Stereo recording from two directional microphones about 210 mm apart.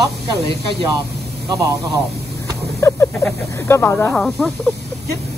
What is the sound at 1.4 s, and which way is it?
Speech, 15° right (ahead or behind).